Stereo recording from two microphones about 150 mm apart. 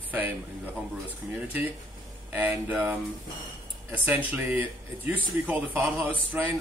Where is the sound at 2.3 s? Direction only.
10° right (ahead or behind).